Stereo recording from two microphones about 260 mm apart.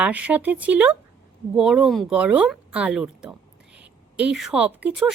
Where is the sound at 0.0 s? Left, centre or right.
Centre.